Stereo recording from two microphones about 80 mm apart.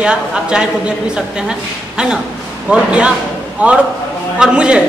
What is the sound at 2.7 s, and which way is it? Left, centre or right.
A man's voice, centre.